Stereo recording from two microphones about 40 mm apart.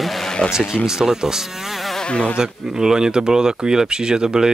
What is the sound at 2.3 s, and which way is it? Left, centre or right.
Speech, centre.